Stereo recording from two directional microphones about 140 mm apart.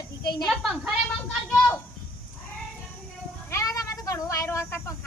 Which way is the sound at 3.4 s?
20° left (ahead or behind).